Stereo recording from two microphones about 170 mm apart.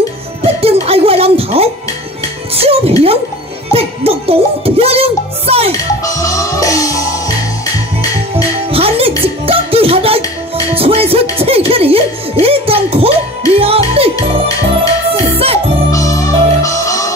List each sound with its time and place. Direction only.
0.4 s music: 35° right (ahead or behind)
5.7 s music: 20° left (ahead or behind)
8.6 s music: 35° right (ahead or behind)
15.3 s music: 35° right (ahead or behind)
15.9 s music: 20° left (ahead or behind)